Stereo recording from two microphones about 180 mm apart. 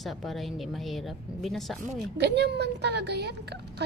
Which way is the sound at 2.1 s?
70° right (ahead or behind).